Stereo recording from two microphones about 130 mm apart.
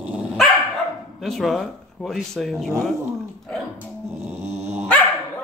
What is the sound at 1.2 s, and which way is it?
Speech, centre (ahead or behind).